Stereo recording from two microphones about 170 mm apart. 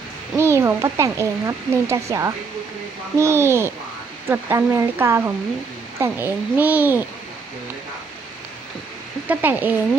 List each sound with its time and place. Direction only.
0.3 s speech: 15° right (ahead or behind)
9.2 s speech: 10° right (ahead or behind)